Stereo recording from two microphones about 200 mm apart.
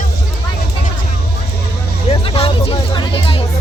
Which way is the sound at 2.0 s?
30° left (ahead or behind).